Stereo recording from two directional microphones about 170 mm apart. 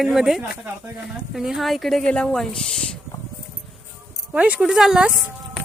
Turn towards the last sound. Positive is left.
turn(degrees=-5)  # may be behind; listen again after turning